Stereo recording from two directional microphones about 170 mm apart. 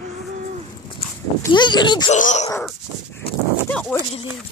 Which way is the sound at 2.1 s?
45° left (ahead or behind).